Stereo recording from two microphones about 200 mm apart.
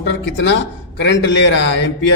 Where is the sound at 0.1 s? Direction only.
65° left (ahead or behind).